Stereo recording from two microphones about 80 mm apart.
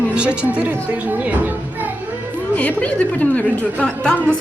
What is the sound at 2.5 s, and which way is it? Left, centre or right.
A woman's voice, centre.